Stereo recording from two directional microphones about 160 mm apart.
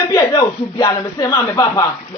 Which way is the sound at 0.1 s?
20° left (ahead or behind).